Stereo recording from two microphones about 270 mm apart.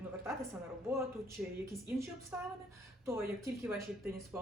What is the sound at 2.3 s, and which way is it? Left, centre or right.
A woman's voice, centre.